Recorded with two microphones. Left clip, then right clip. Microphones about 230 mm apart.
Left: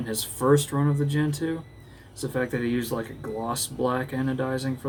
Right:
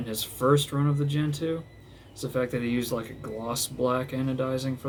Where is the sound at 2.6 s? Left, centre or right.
Left.